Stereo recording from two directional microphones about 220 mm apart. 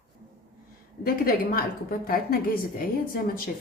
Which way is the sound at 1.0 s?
40° left (ahead or behind).